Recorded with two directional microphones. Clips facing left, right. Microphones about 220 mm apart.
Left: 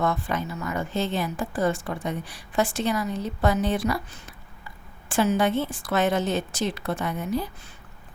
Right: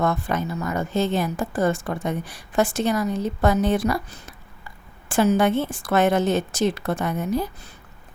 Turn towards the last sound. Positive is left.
turn(degrees=-45)  # may be behind; listen again after turning